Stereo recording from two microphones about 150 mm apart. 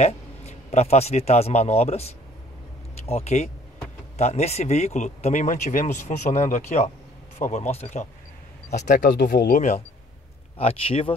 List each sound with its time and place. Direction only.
0.0 s a man's voice: 45° left (ahead or behind)
8.7 s speech: 60° left (ahead or behind)
10.6 s speech: 40° left (ahead or behind)